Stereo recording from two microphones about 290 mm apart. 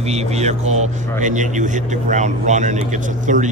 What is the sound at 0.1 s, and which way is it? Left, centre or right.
Speech, right.